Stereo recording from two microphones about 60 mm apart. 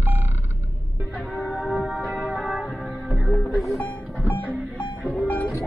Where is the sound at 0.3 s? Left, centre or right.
Right.